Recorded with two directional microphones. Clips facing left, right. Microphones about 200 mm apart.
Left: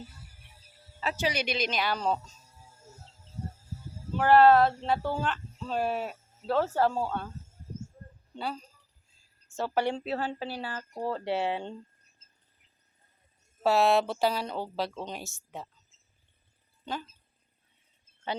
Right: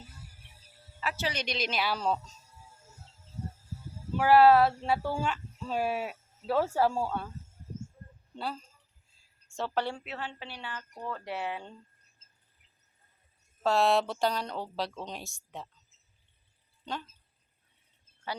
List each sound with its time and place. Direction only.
1.1 s speech: 10° left (ahead or behind)
4.2 s speech: 5° right (ahead or behind)
8.4 s speech: centre (ahead or behind)
10.0 s speech: 35° left (ahead or behind)
13.6 s speech: 5° left (ahead or behind)
16.8 s speech: 5° left (ahead or behind)